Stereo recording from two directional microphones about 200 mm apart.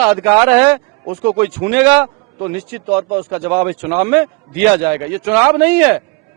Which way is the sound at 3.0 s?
25° right (ahead or behind).